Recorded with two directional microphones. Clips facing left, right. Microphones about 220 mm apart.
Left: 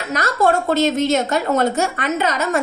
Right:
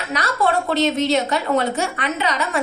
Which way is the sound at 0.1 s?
45° left (ahead or behind).